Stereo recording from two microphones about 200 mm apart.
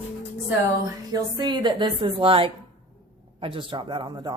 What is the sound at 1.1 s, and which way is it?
A woman's voice, 20° right (ahead or behind).